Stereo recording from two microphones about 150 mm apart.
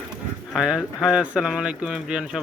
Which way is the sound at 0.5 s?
5° right (ahead or behind).